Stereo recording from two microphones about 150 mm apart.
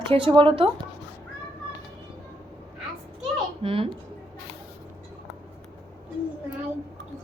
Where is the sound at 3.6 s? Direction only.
35° right (ahead or behind).